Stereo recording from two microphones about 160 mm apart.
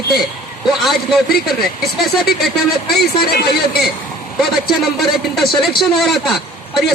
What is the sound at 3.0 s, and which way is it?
Speech, 75° left (ahead or behind).